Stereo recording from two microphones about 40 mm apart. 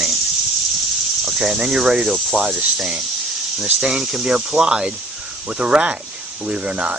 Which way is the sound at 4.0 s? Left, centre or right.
Centre.